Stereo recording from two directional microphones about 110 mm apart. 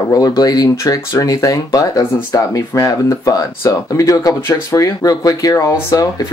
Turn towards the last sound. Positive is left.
turn(degrees=30)  # may be behind; listen again after turning